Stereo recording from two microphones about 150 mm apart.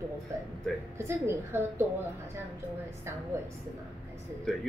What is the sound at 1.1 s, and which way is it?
Speech, 15° right (ahead or behind).